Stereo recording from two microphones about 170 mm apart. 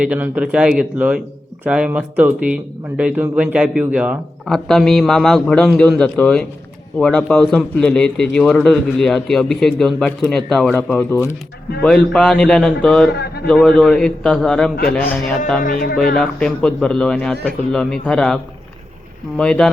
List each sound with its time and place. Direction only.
0.0 s speech: 5° right (ahead or behind)
4.4 s a man's voice: centre (ahead or behind)
13.1 s speech: 70° left (ahead or behind)
13.5 s a man's voice: 5° left (ahead or behind)
15.6 s speech: 60° left (ahead or behind)
16.1 s a man's voice: 5° left (ahead or behind)
19.4 s a man's voice: 5° left (ahead or behind)